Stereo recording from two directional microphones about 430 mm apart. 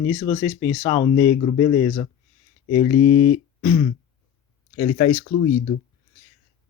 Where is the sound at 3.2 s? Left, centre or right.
Centre.